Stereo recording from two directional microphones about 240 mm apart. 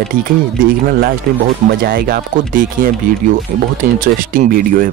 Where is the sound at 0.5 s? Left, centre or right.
Right.